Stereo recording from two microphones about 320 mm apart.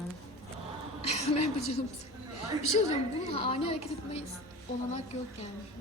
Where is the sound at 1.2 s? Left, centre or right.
Left.